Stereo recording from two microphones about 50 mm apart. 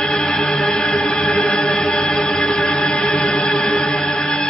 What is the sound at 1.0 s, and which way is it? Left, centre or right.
Music, centre.